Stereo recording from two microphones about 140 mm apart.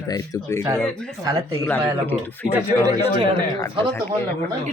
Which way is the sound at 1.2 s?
25° right (ahead or behind).